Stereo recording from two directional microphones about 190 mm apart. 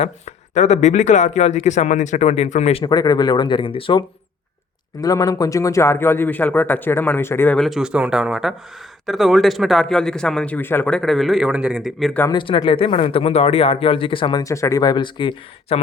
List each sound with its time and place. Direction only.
0.0 s speech: 35° left (ahead or behind)
2.8 s speech: 20° left (ahead or behind); by 12.2 s centre (ahead or behind)
12.2 s speech: 25° left (ahead or behind)